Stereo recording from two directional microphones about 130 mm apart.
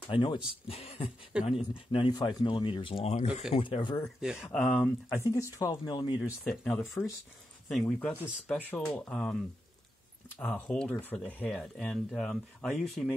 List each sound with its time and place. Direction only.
0.1 s speech: 40° left (ahead or behind)
1.3 s speech: 10° right (ahead or behind)
1.9 s speech: 40° left (ahead or behind)
4.0 s speech: 5° right (ahead or behind)
4.5 s speech: 10° left (ahead or behind)
5.2 s speech: 25° left (ahead or behind)
6.4 s speech: 5° left (ahead or behind)
7.8 s speech: 10° left (ahead or behind)
10.4 s speech: 5° left (ahead or behind)